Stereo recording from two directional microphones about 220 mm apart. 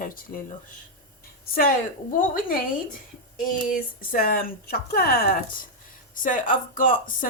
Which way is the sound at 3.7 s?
40° left (ahead or behind).